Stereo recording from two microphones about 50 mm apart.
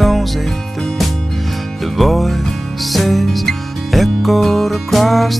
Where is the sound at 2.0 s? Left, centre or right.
Centre.